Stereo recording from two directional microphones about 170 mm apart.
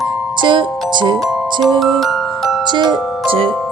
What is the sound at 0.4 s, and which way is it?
Speech, 30° right (ahead or behind).